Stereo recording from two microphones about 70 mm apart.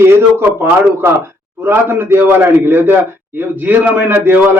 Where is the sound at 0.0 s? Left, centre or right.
Right.